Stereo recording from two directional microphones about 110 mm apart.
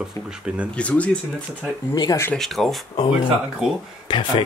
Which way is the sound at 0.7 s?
10° left (ahead or behind).